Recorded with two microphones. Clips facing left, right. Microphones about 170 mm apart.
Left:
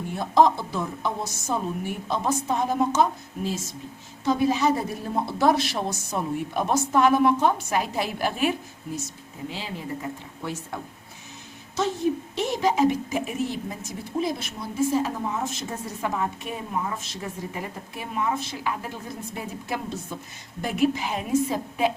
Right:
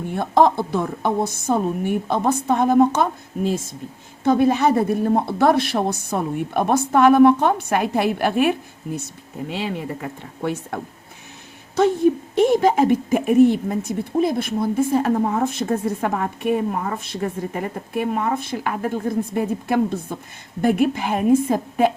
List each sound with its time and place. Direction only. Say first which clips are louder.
0.1 s a woman's voice: right 3 dB; 55° right (ahead or behind)
11.8 s a woman's voice: right 8 dB; 55° right (ahead or behind)